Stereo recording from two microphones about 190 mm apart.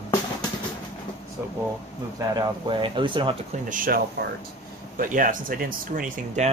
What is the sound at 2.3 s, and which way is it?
Speech, 25° right (ahead or behind).